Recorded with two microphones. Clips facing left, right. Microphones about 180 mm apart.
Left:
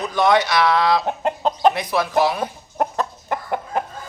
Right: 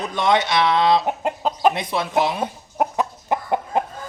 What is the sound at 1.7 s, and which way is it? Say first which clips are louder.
Speech: left 2 dB; 25° right (ahead or behind).